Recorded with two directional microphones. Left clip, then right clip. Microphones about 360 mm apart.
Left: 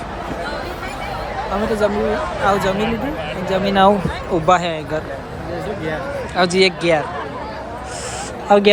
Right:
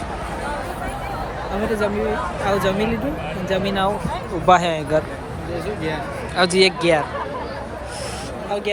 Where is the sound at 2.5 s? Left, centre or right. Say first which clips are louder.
Left 2 dB; centre.